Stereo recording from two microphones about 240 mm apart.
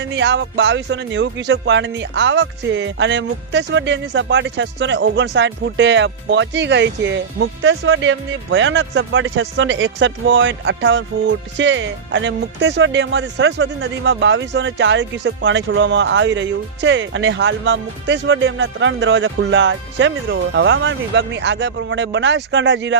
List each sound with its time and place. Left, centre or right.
0.0 s speech: right